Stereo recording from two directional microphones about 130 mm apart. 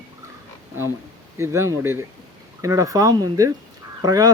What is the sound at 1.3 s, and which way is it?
Speech, 20° right (ahead or behind).